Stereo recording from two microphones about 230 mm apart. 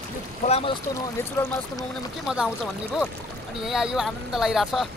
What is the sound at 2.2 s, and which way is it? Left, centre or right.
Speech, centre.